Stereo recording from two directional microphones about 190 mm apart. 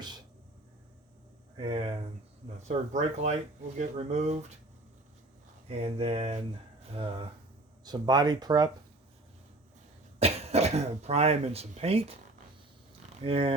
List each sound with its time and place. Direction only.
1.5 s a sound: 30° right (ahead or behind)
2.6 s speech: 40° right (ahead or behind)
5.6 s speech: 30° right (ahead or behind)
10.2 s speech: 35° right (ahead or behind)
13.2 s speech: 30° right (ahead or behind)